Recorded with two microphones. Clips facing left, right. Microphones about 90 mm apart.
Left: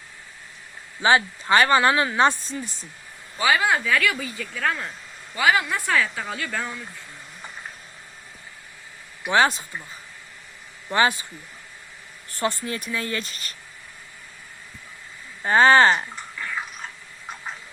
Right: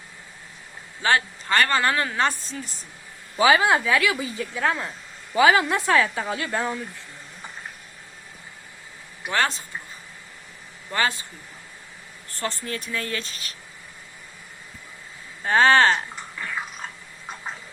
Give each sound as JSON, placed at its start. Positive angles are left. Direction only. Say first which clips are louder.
{"t": 1.0, "sound": "speech", "louder": "left 3 dB", "side_deg": 15}
{"t": 3.5, "sound": "speech", "louder": "even", "side_deg": -25}
{"t": 9.2, "sound": "speech", "louder": "left 5 dB", "side_deg": 10}
{"t": 10.9, "sound": "speech", "louder": "left 4 dB", "side_deg": 15}
{"t": 12.3, "sound": "speech", "louder": "left 4 dB", "side_deg": 15}
{"t": 15.4, "sound": "speech", "louder": "left 2 dB", "side_deg": 5}